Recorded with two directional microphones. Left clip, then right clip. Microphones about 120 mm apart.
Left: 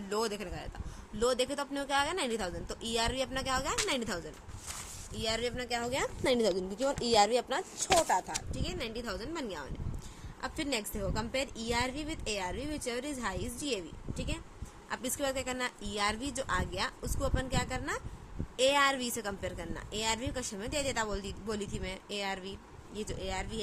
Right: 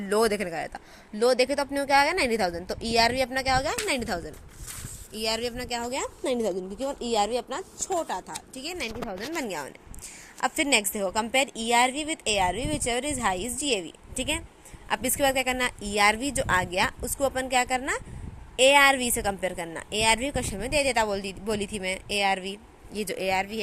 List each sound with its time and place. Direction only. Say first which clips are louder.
0.1 s speech: right 10 dB; 55° right (ahead or behind)
1.2 s a woman's voice: right 8 dB; 40° right (ahead or behind)
5.1 s speech: right 5 dB; 65° right (ahead or behind); by 5.9 s 40° right (ahead or behind)
6.2 s speech: right 1 dB; 5° right (ahead or behind)
8.5 s a woman's voice: right 5 dB; 55° right (ahead or behind)
10.4 s a woman's voice: right 12 dB; 65° right (ahead or behind); by 13.8 s 50° right (ahead or behind)
14.8 s a woman's voice: right 10 dB; 50° right (ahead or behind)
23.0 s speech: right 11 dB; 55° right (ahead or behind)